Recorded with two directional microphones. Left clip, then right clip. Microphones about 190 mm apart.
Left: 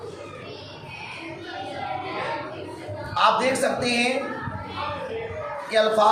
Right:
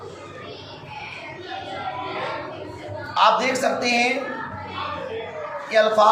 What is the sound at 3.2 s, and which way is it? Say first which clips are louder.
Speech: right 2 dB; 20° left (ahead or behind).